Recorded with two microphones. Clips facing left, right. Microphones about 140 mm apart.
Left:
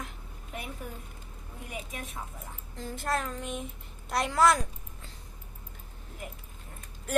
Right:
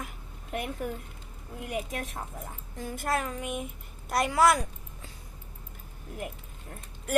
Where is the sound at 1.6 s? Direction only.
55° right (ahead or behind).